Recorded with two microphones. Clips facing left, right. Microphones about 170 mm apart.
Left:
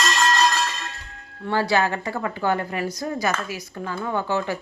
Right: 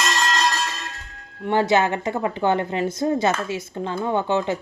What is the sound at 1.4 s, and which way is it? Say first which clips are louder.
A woman's voice: right 3 dB; 20° right (ahead or behind).